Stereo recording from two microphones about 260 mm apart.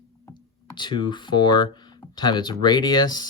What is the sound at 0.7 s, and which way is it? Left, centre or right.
Speech, centre.